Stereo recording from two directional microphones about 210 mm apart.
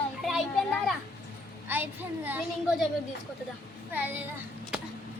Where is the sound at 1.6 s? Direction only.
10° right (ahead or behind).